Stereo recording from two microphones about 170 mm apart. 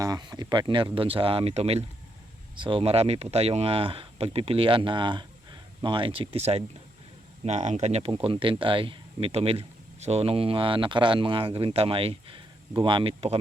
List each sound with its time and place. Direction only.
0.0 s speech: 25° right (ahead or behind)